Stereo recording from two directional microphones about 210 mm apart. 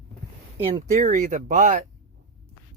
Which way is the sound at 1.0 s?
35° right (ahead or behind).